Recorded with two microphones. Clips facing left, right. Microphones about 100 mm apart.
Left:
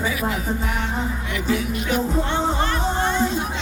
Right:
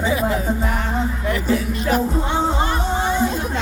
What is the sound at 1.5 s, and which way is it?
Music, 40° right (ahead or behind).